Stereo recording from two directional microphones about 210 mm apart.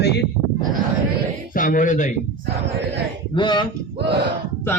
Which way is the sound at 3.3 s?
20° left (ahead or behind).